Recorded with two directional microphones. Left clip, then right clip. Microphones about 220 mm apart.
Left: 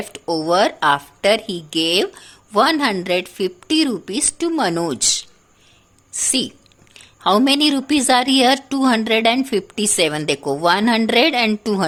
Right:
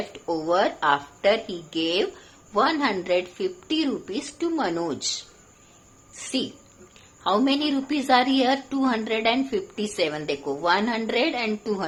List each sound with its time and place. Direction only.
0.1 s a woman's voice: 55° left (ahead or behind)
6.9 s a woman's voice: 55° left (ahead or behind)